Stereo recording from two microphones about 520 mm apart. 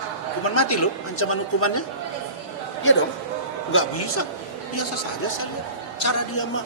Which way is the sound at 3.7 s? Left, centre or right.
Left.